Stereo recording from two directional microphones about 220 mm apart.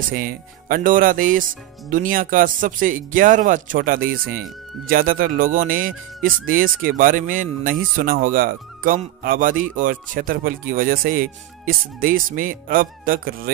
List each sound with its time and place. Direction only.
0.1 s speech: 40° right (ahead or behind)